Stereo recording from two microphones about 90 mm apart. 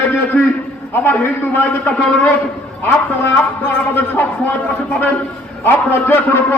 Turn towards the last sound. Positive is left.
turn(degrees=20)  # may be behind; listen again after turning